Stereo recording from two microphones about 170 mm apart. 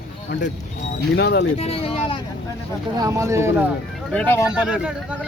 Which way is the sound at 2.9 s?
20° right (ahead or behind).